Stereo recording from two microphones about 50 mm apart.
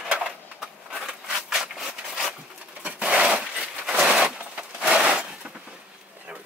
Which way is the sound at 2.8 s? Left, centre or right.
Right.